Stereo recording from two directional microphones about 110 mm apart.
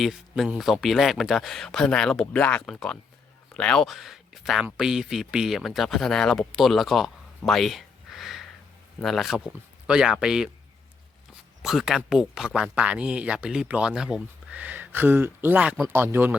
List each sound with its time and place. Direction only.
0.0 s speech: centre (ahead or behind)
11.6 s speech: 5° right (ahead or behind); by 16.4 s 20° right (ahead or behind)